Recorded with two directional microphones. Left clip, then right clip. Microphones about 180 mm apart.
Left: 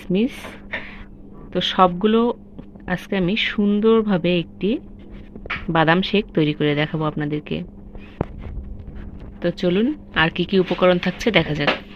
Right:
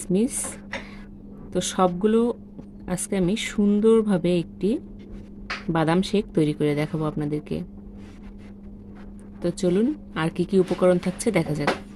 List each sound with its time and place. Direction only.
0.1 s speech: 15° right (ahead or behind)
1.5 s speech: 15° right (ahead or behind)
9.4 s speech: 15° right (ahead or behind)